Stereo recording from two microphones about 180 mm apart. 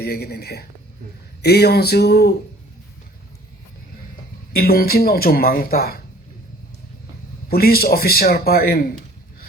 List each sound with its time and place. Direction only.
0.0 s speech: 60° left (ahead or behind)
4.5 s speech: 55° left (ahead or behind)
7.4 s a man's voice: 55° left (ahead or behind)